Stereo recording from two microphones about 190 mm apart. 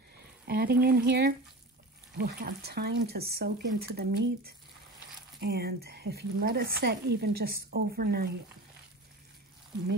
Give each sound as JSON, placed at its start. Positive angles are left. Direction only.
{"t": 0.5, "sound": "speech", "side_deg": -55}